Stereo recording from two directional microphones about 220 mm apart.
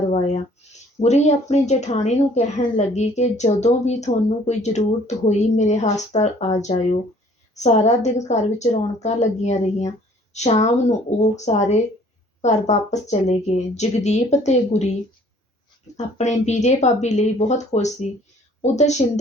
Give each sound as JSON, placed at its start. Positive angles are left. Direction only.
{"t": 0.1, "sound": "speech", "side_deg": 30}
{"t": 0.6, "sound": "a sound", "side_deg": 30}
{"t": 1.0, "sound": "a woman's voice", "side_deg": 30}
{"t": 16.0, "sound": "a woman's voice", "side_deg": 30}